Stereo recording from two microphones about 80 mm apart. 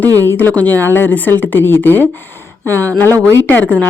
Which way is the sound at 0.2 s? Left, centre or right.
Left.